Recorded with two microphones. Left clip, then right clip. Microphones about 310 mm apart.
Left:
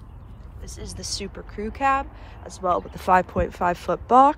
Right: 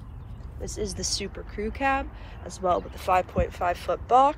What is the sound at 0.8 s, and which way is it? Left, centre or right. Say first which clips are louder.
Speech: right 2 dB; centre.